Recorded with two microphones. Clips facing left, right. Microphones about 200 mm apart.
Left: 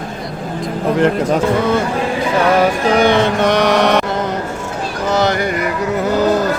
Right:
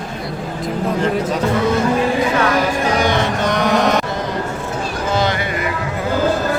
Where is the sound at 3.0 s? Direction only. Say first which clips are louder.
Left 5 dB; 60° left (ahead or behind).